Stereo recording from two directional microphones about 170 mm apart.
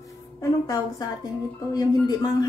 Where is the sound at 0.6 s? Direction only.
20° left (ahead or behind).